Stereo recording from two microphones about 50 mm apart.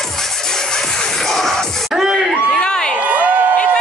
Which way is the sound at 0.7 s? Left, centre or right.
Centre.